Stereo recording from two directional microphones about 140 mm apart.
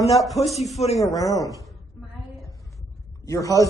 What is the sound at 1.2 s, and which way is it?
Speech, 25° left (ahead or behind).